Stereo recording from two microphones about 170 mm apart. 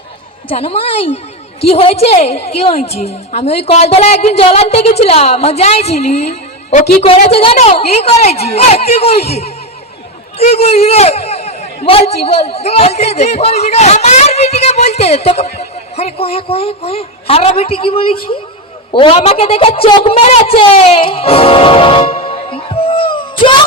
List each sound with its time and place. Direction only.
0.4 s a man's voice: 35° left (ahead or behind)